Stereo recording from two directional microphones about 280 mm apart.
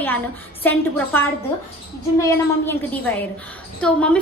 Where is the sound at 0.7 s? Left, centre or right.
Centre.